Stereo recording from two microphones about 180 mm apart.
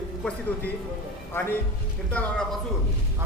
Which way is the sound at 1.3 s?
15° left (ahead or behind).